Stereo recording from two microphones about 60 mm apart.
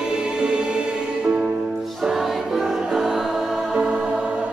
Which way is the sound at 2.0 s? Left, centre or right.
Centre.